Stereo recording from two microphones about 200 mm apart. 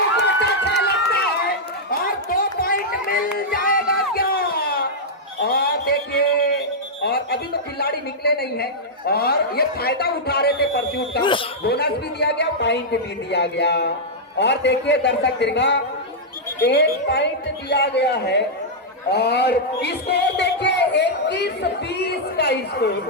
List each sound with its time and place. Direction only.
0.2 s run: 60° left (ahead or behind)
1.9 s run: 45° left (ahead or behind)
3.3 s a sound: 45° left (ahead or behind)
7.0 s music: 55° left (ahead or behind)
7.8 s speech: 55° left (ahead or behind)
11.2 s speech: 25° left (ahead or behind)
11.6 s speech: 55° left (ahead or behind)